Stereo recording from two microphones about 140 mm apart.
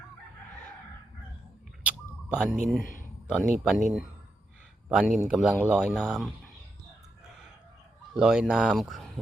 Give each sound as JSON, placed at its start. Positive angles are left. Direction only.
{"t": 1.9, "sound": "a sound", "side_deg": -5}
{"t": 2.8, "sound": "speech", "side_deg": 75}
{"t": 3.2, "sound": "speech", "side_deg": -5}
{"t": 8.1, "sound": "speech", "side_deg": -5}